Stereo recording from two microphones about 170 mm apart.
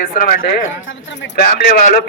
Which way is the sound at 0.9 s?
90° left.